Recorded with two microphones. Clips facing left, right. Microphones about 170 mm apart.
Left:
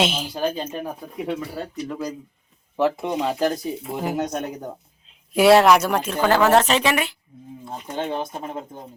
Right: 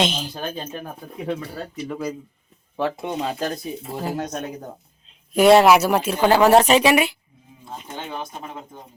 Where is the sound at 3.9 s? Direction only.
15° left (ahead or behind).